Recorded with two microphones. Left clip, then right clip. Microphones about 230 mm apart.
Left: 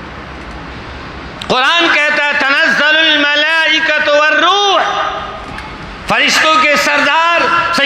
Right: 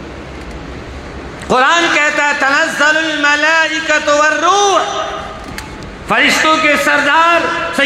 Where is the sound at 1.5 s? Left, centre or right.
Left.